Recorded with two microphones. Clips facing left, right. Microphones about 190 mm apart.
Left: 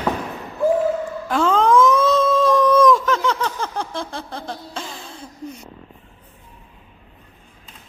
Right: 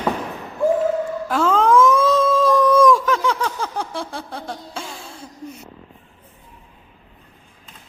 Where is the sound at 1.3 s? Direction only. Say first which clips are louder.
Even; 5° right (ahead or behind).